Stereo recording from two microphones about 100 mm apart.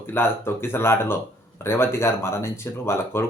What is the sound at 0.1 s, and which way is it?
Speech, 25° left (ahead or behind).